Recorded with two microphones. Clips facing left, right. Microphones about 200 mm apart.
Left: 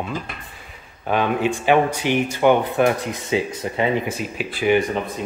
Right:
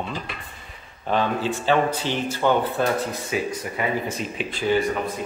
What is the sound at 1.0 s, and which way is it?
Speech, 15° left (ahead or behind).